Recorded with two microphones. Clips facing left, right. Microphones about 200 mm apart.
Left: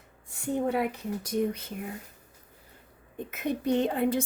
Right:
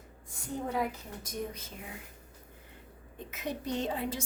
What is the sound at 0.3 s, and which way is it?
A woman's voice, 65° left (ahead or behind).